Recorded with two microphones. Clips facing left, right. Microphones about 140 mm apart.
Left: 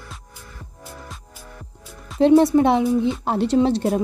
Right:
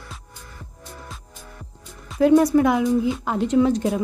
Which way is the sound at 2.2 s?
25° left (ahead or behind).